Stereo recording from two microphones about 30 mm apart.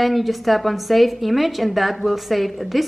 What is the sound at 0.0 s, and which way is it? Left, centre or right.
Speech, centre.